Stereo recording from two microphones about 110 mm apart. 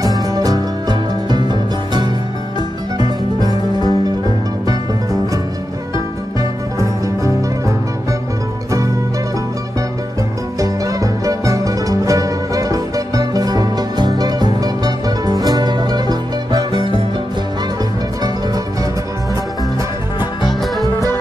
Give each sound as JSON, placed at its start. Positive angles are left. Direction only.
{"t": 0.0, "sound": "music", "side_deg": -35}
{"t": 6.8, "sound": "music", "side_deg": -30}
{"t": 10.6, "sound": "music", "side_deg": -30}